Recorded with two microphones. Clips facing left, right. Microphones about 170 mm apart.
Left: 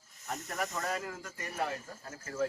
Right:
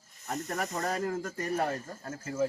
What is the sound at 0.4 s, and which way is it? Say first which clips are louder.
Speech: right 3 dB; 40° right (ahead or behind).